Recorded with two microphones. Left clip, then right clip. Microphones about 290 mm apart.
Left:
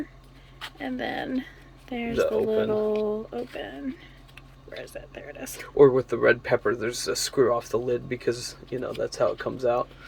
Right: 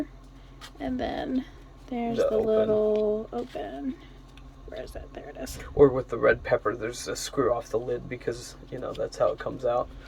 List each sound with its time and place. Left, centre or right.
0.8 s speech: centre
5.7 s speech: left